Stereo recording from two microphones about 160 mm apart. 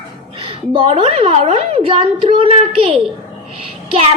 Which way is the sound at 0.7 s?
35° right (ahead or behind).